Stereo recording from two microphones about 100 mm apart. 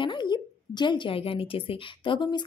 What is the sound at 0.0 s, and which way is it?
Speech, 50° left (ahead or behind).